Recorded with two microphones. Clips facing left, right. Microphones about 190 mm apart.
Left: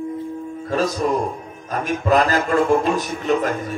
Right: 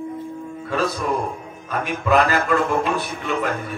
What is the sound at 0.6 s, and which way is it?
Music, 40° left (ahead or behind).